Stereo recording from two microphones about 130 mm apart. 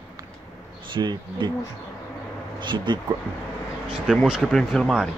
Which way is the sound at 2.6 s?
35° right (ahead or behind).